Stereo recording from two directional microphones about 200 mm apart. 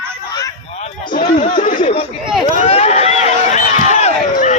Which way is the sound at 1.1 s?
40° left (ahead or behind).